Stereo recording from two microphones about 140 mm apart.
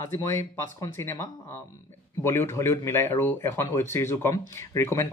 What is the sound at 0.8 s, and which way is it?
Speech, 15° left (ahead or behind).